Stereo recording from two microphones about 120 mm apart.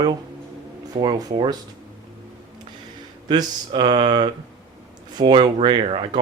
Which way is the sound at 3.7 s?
45° right (ahead or behind).